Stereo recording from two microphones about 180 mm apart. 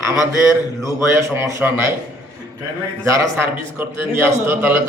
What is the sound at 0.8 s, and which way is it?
A man's voice, 15° right (ahead or behind).